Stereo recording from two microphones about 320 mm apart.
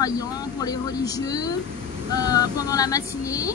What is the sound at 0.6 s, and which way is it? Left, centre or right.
Vehicle, centre.